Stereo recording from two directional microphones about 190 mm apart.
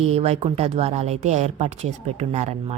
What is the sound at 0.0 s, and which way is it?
Speech, 35° right (ahead or behind).